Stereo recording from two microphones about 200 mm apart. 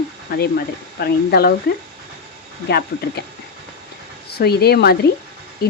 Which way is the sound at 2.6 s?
55° left (ahead or behind).